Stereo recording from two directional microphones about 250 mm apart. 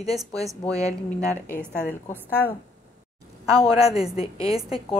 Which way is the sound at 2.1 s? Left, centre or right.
Centre.